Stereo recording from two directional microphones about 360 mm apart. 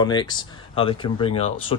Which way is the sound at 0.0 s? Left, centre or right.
Centre.